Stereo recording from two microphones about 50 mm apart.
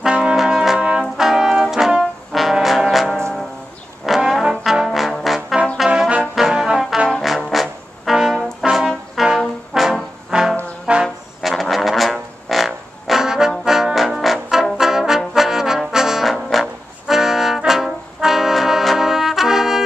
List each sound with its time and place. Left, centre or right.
0.2 s brass instrument: centre
4.3 s trombone: centre
5.2 s brass instrument: centre
5.9 s brass instrument: right
6.3 s brass instrument: centre
9.8 s trombone: centre
10.3 s trombone: centre
10.9 s brass instrument: centre
11.4 s music: centre
13.2 s brass instrument: centre
13.7 s trombone: centre
17.1 s brass instrument: centre